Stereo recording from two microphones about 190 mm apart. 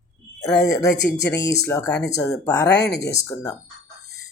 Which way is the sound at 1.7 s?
15° left (ahead or behind).